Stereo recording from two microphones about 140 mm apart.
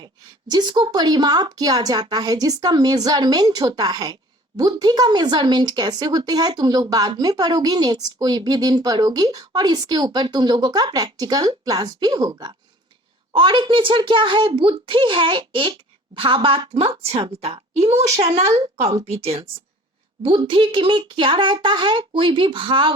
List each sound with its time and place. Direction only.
0.0 s a woman's voice: 30° right (ahead or behind)